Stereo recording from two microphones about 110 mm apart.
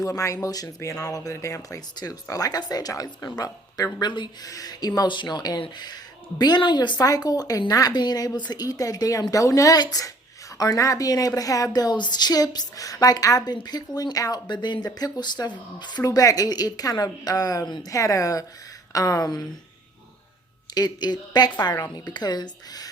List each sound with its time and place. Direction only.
0.0 s a woman's voice: 30° left (ahead or behind)
20.7 s a woman's voice: 40° left (ahead or behind)